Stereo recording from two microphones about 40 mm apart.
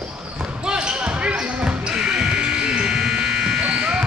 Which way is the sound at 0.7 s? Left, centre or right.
Right.